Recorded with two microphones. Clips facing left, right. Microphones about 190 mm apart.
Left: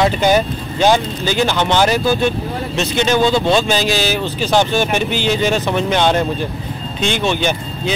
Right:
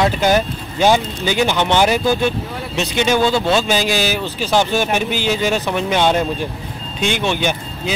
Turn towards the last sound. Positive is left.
turn(degrees=-10)  # may be behind; listen again after turning